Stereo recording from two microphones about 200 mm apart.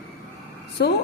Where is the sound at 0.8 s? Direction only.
55° left (ahead or behind).